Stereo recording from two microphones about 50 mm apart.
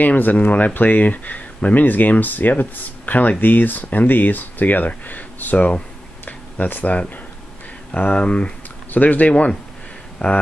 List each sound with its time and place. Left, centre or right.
0.0 s speech: left
6.2 s a sound: left
7.9 s speech: left
8.9 s speech: left
9.3 s speech: left